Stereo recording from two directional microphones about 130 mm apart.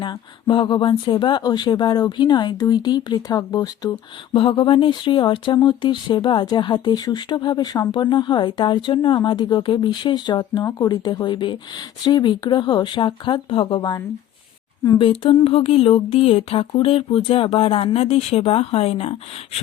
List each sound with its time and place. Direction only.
0.0 s speech: 35° left (ahead or behind)
4.4 s speech: 40° left (ahead or behind)
14.9 s speech: 40° left (ahead or behind)